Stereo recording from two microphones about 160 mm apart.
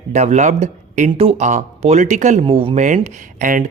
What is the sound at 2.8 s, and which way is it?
Speech, 50° right (ahead or behind).